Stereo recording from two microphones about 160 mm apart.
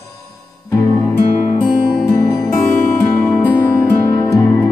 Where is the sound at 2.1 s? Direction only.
25° left (ahead or behind).